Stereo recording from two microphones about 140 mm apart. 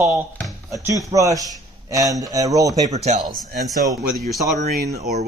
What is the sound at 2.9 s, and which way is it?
Speech, 50° right (ahead or behind).